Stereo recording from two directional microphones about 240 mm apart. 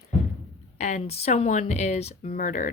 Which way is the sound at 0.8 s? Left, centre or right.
Left.